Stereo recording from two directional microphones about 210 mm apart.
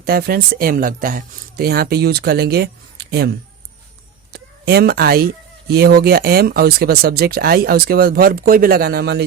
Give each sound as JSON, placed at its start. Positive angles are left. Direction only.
{"t": 0.0, "sound": "speech", "side_deg": -45}